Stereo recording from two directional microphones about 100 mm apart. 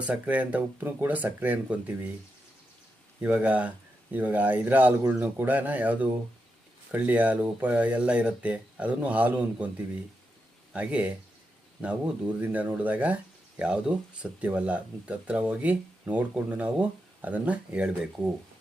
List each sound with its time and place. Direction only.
0.0 s speech: 15° right (ahead or behind)
3.2 s speech: 15° right (ahead or behind)